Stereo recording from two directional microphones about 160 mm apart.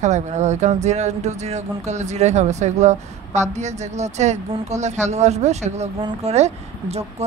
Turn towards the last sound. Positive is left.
turn(degrees=-40)  # may be behind; listen again after turning